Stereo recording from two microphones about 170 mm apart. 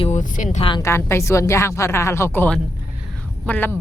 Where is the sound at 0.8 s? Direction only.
15° left (ahead or behind).